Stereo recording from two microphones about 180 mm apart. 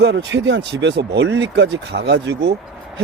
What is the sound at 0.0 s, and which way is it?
Speech, 70° right (ahead or behind).